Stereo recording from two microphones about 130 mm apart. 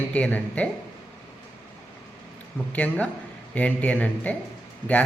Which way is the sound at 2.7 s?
10° left (ahead or behind).